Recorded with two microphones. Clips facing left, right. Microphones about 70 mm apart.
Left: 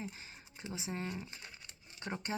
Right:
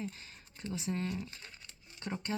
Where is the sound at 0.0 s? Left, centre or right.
Centre.